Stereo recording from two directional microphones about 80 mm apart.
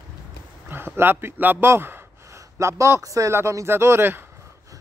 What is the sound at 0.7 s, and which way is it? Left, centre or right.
A man's voice, right.